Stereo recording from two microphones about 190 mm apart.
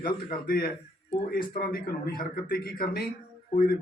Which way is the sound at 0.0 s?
50° left (ahead or behind).